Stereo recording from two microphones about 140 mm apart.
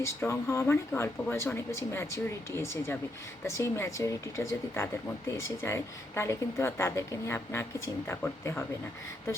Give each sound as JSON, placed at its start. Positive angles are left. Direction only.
{"t": 0.0, "sound": "a woman's voice", "side_deg": 20}